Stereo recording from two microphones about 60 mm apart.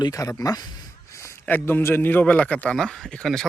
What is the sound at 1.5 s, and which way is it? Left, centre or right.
Speech, left.